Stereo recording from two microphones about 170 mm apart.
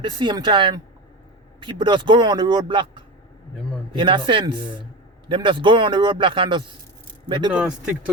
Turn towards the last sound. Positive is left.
turn(degrees=-5)  # may be behind; listen again after turning